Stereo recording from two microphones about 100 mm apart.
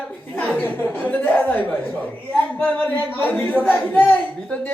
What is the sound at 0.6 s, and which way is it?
A man's voice, 20° left (ahead or behind).